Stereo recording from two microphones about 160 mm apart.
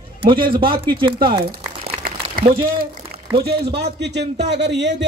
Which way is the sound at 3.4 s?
85° right.